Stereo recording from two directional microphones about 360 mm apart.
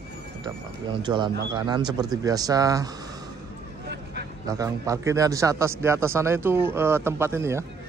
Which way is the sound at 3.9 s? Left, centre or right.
Right.